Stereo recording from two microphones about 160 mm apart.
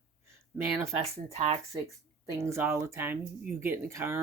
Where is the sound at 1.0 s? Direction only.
40° right (ahead or behind).